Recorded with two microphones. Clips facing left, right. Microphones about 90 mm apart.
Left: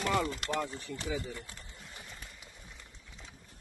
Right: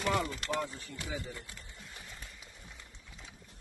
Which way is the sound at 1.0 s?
35° left (ahead or behind).